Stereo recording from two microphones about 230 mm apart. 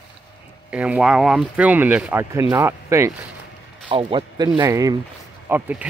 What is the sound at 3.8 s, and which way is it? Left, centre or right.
Speech, right.